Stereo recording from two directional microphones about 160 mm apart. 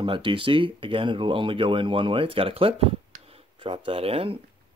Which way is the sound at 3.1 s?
40° right (ahead or behind).